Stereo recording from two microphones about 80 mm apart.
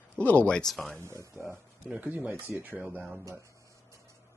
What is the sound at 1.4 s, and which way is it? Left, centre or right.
Speech, right.